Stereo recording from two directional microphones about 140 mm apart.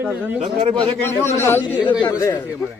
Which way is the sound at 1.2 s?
20° left (ahead or behind).